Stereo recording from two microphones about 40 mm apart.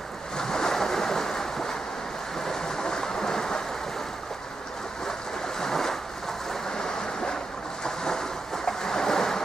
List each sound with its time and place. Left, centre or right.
0.4 s ocean: centre
2.3 s a sound: centre
5.6 s ocean: centre
6.5 s waves: centre
7.8 s ocean: centre